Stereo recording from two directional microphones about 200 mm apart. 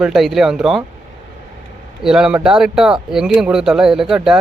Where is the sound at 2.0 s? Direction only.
5° right (ahead or behind).